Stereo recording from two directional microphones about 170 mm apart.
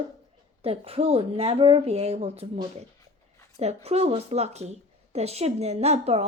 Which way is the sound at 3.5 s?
40° right (ahead or behind).